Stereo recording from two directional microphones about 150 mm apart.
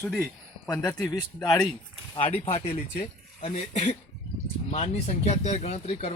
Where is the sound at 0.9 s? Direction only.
25° left (ahead or behind).